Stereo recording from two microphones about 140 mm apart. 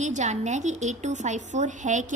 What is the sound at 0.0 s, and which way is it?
A woman's voice, 55° right (ahead or behind).